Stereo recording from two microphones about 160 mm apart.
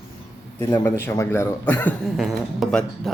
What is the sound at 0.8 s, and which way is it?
A man's voice, 15° left (ahead or behind).